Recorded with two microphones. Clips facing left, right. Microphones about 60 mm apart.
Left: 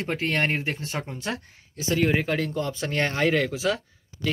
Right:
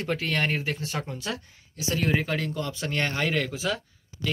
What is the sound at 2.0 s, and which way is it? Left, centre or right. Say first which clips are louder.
Speech: left 3 dB; left.